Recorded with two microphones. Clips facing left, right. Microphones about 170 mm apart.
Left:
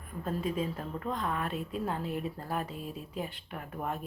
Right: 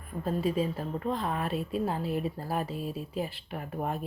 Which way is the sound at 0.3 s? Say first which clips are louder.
Right 4 dB; 30° right (ahead or behind).